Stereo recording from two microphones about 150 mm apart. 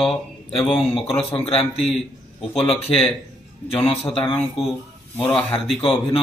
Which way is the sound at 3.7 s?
40° left (ahead or behind).